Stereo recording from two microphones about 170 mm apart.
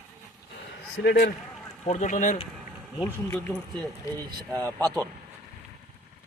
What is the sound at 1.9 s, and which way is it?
Speech, 45° left (ahead or behind).